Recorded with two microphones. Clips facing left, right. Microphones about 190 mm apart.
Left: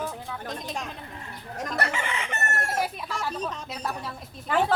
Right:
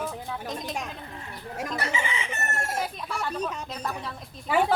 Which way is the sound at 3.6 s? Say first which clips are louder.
Even; 5° left (ahead or behind).